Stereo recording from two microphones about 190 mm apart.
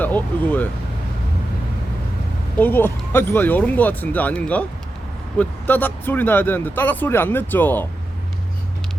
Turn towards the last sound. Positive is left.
turn(degrees=10)  # may be behind; listen again after turning